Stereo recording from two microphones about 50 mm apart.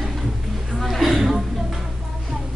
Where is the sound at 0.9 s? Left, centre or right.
Centre.